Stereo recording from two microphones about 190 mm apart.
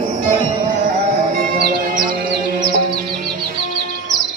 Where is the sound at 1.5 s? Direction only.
45° right (ahead or behind).